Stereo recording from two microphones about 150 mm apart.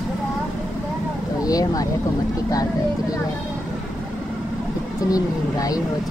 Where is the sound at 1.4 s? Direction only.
25° left (ahead or behind).